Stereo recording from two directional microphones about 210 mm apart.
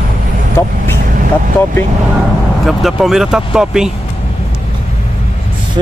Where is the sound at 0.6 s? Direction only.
15° left (ahead or behind).